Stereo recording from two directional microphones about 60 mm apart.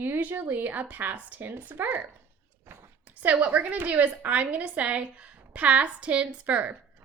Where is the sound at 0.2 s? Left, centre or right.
Right.